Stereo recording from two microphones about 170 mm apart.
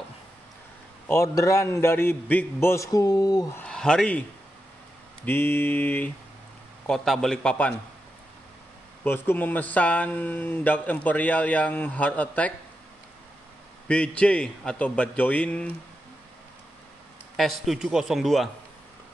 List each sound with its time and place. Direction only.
1.0 s speech: 15° left (ahead or behind)
3.6 s speech: 5° left (ahead or behind)
5.2 s a man's voice: 10° left (ahead or behind)
9.0 s speech: 10° left (ahead or behind)
13.8 s speech: 5° left (ahead or behind)
17.4 s a man's voice: centre (ahead or behind)